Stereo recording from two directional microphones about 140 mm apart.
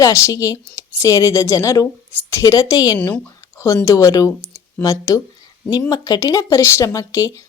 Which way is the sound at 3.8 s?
25° left (ahead or behind).